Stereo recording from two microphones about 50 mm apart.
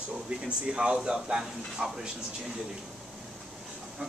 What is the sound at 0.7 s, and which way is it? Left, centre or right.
Speech, centre.